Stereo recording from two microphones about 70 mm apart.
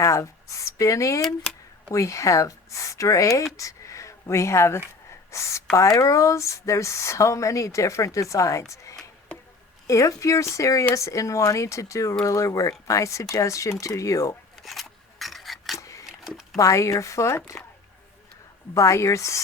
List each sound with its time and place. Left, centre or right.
0.0 s speech: left
14.6 s scissors: centre
15.8 s wood: left
16.6 s speech: left
18.7 s speech: left